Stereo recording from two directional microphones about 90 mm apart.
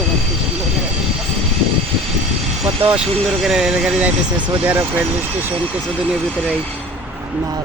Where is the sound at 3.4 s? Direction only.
5° right (ahead or behind).